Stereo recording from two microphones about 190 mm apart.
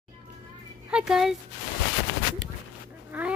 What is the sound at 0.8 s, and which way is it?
Speech, 5° right (ahead or behind).